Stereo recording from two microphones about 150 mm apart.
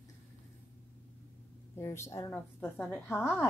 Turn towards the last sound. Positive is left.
turn(degrees=15)  # may be behind; listen again after turning